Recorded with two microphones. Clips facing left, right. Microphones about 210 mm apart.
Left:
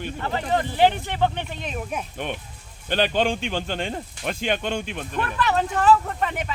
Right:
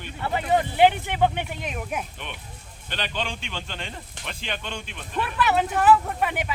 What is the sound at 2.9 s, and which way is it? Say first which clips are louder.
Speech: left 9 dB; 45° left (ahead or behind).